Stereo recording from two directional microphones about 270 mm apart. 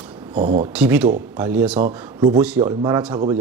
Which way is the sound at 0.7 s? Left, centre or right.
Centre.